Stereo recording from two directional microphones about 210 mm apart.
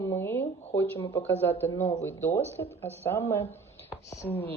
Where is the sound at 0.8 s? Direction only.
10° left (ahead or behind).